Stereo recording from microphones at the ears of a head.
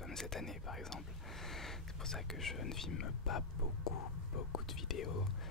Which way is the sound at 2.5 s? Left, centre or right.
Left.